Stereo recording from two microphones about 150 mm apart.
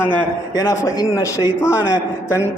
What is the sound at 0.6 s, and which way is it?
Speech, 25° left (ahead or behind).